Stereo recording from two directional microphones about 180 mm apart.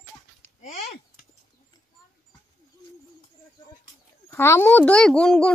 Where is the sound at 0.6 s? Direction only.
35° left (ahead or behind).